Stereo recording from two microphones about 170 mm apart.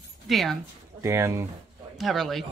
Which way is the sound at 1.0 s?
15° right (ahead or behind).